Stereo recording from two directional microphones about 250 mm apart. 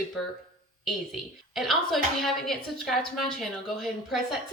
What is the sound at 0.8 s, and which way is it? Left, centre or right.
Speech, centre.